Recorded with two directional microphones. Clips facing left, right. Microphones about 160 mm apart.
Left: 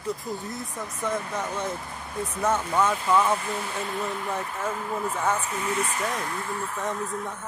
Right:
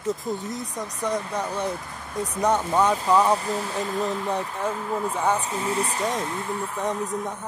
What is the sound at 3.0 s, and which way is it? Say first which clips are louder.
Speech: right 3 dB; 35° right (ahead or behind).